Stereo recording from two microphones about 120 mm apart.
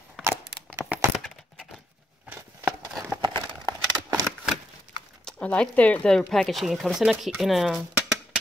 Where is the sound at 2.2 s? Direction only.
20° right (ahead or behind).